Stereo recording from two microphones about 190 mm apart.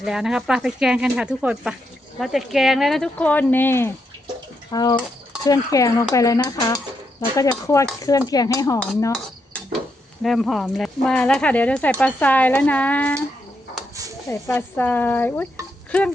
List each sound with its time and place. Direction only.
0.0 s speech: centre (ahead or behind); by 8.8 s 20° left (ahead or behind)
10.2 s speech: centre (ahead or behind)
14.3 s speech: 10° left (ahead or behind)